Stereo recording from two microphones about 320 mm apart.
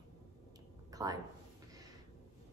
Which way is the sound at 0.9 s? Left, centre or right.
Centre.